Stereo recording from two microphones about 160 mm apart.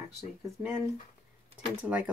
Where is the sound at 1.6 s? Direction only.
10° right (ahead or behind).